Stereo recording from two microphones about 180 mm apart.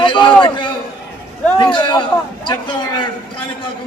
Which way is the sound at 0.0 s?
25° left (ahead or behind).